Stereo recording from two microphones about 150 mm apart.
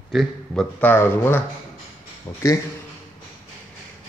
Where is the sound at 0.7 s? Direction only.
15° left (ahead or behind).